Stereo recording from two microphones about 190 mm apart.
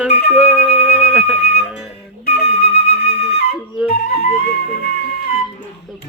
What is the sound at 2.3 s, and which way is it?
Flute, 55° left (ahead or behind).